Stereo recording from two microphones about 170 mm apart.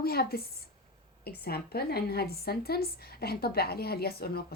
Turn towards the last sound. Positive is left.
turn(degrees=65)  # may be behind; listen again after turning